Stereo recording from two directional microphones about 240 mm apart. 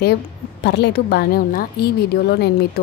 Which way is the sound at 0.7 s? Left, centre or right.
Left.